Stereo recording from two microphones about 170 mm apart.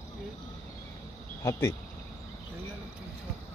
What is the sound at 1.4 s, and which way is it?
Speech, 20° left (ahead or behind).